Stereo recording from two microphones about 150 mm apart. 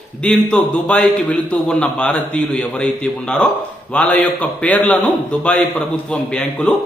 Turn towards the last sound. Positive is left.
turn(degrees=5)  # may be behind; listen again after turning